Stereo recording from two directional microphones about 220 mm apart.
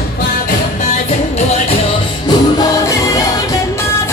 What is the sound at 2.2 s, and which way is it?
Music, 15° left (ahead or behind).